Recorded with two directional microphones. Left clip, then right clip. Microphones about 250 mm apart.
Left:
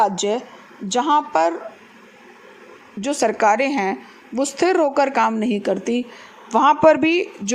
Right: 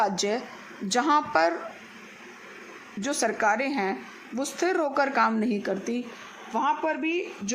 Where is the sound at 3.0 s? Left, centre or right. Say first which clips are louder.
Left 8 dB; centre.